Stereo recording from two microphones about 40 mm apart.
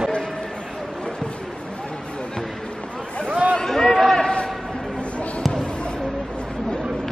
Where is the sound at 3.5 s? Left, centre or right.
Centre.